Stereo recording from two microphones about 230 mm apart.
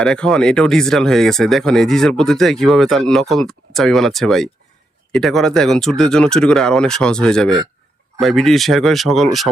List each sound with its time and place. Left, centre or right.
0.0 s speech: centre